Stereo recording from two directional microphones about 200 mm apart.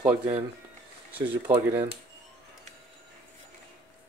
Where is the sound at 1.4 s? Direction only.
10° right (ahead or behind).